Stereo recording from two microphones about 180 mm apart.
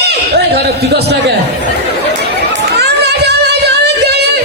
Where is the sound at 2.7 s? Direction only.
65° right (ahead or behind).